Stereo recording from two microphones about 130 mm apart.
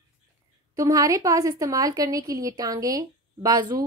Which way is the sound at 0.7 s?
25° right (ahead or behind).